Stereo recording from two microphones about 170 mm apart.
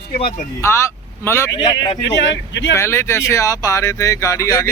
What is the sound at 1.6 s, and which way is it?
Speech, 25° left (ahead or behind).